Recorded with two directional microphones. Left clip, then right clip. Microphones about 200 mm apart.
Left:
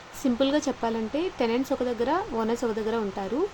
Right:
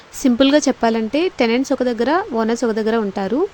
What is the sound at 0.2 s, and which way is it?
Speech, 40° right (ahead or behind).